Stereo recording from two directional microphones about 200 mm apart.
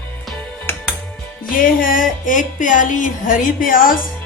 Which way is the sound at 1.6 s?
45° left (ahead or behind).